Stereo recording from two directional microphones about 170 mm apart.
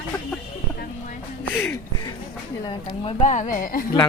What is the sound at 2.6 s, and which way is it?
A woman's voice, 35° left (ahead or behind).